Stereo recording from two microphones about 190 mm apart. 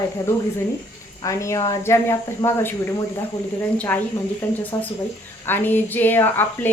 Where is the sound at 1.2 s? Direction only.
15° left (ahead or behind).